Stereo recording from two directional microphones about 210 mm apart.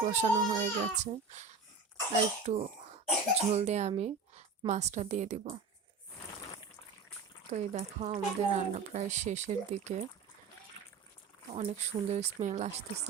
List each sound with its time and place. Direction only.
0.0 s a woman's voice: 35° right (ahead or behind)
7.5 s speech: 35° right (ahead or behind)
10.8 s a sound: 25° left (ahead or behind)
11.5 s speech: 30° right (ahead or behind)